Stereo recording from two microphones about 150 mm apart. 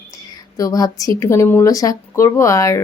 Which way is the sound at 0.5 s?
25° left (ahead or behind).